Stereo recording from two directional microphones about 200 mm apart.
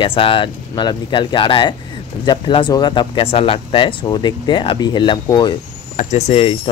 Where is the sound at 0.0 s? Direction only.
25° left (ahead or behind).